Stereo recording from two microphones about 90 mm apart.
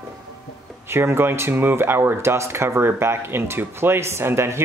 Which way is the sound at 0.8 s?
30° right (ahead or behind).